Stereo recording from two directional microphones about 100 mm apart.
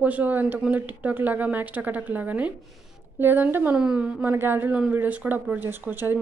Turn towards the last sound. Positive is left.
turn(degrees=-20)  # may be behind; listen again after turning